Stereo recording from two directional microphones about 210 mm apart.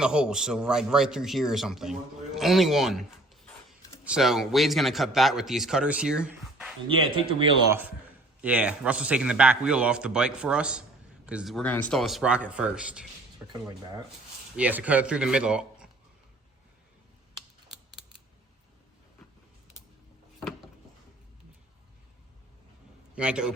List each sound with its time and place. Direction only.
0.0 s a man's voice: 5° right (ahead or behind)
13.5 s speech: 20° right (ahead or behind)
14.5 s a man's voice: 5° right (ahead or behind)
23.1 s a man's voice: 5° right (ahead or behind)